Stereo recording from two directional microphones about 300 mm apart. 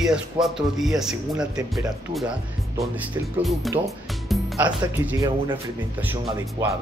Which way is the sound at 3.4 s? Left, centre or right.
Centre.